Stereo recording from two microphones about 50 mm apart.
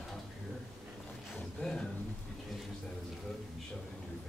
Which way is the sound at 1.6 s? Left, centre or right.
Centre.